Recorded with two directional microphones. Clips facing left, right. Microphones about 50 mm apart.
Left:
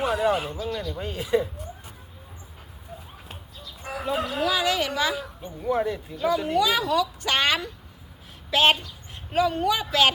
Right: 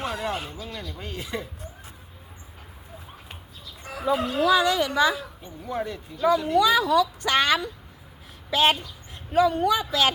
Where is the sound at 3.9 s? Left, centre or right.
Centre.